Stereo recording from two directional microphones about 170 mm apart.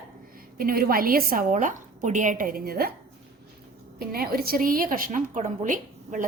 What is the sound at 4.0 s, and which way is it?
A woman's voice, 60° right (ahead or behind).